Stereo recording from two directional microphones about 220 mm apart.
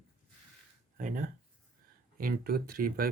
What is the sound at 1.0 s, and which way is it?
Speech, 35° right (ahead or behind).